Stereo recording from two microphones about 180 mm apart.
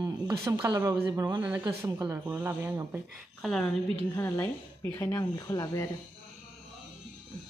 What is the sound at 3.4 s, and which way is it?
Speech, centre (ahead or behind).